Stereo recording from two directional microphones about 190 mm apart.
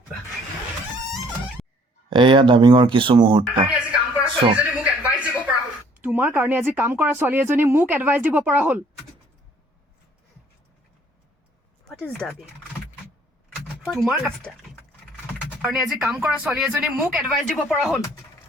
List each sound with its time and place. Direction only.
2.0 s speech: 25° right (ahead or behind)
3.8 s music: 5° right (ahead or behind)
4.5 s a sound: 5° right (ahead or behind)
6.0 s speech: 10° right (ahead or behind)
11.9 s speech: 5° left (ahead or behind)
13.9 s speech: centre (ahead or behind)
15.6 s speech: centre (ahead or behind)
17.8 s speech: 15° left (ahead or behind)